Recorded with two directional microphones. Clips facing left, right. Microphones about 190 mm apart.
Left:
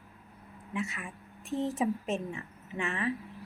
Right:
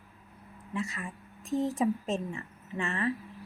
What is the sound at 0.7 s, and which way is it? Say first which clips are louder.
Speech: right 1 dB; 20° left (ahead or behind).